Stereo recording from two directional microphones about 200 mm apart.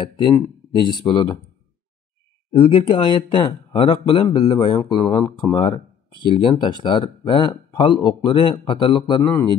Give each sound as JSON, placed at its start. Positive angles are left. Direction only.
{"t": 0.0, "sound": "speech", "side_deg": 25}
{"t": 2.5, "sound": "speech", "side_deg": 25}